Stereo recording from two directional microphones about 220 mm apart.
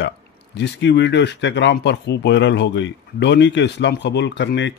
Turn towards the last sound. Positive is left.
turn(degrees=55)  # may be behind; listen again after turning